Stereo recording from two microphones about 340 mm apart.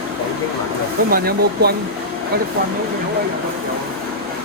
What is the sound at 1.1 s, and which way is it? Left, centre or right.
Speech, right.